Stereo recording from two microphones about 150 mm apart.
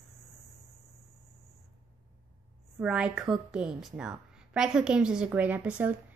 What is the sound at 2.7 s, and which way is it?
A woman's voice, 5° right (ahead or behind).